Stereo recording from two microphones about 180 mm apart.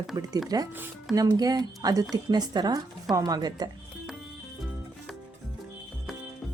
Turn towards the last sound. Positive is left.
turn(degrees=0)  # may be behind; listen again after turning